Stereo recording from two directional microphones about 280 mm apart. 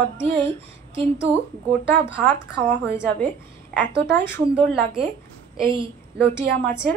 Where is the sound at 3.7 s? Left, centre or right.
Centre.